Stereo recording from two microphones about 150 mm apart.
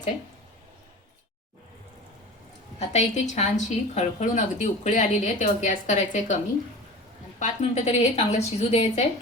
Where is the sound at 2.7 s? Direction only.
50° left (ahead or behind).